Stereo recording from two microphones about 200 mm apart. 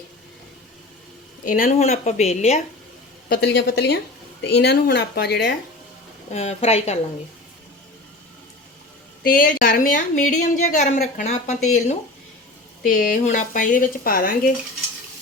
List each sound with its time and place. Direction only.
1.5 s a woman's voice: 45° left (ahead or behind)
3.2 s speech: 50° left (ahead or behind)
6.3 s a woman's voice: 30° left (ahead or behind)
9.2 s a woman's voice: 45° left (ahead or behind)